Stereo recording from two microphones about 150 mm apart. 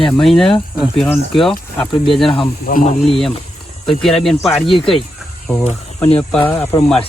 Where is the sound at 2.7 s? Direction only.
65° left (ahead or behind).